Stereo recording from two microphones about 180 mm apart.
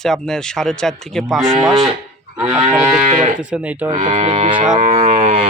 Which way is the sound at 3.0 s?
35° right (ahead or behind).